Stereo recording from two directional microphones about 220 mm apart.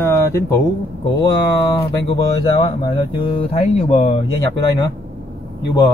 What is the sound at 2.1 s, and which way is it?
Speech, 20° left (ahead or behind).